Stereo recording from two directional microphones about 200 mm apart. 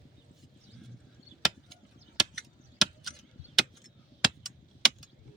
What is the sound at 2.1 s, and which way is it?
Chop, centre (ahead or behind).